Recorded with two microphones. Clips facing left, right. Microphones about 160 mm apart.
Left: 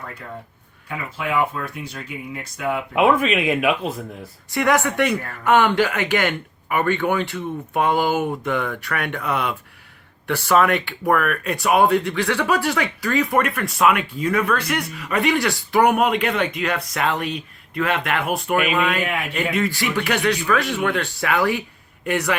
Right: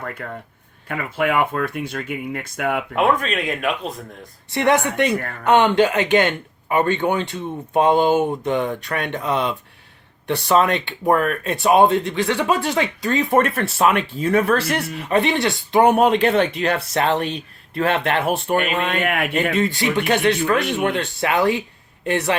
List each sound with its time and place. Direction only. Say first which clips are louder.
0.0 s speech: right 4 dB; 55° right (ahead or behind)
2.9 s speech: left 4 dB; 5° left (ahead or behind)
4.5 s speech: right 1 dB; 25° right (ahead or behind)
19.0 s speech: right 4 dB; 55° right (ahead or behind)
19.3 s speech: right 3 dB; 20° right (ahead or behind)